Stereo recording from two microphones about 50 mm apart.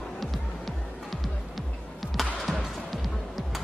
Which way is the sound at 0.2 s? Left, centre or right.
Centre.